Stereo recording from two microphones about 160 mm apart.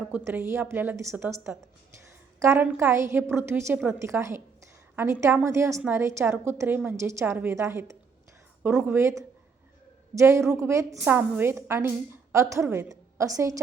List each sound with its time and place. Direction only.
0.3 s a woman's voice: 15° right (ahead or behind)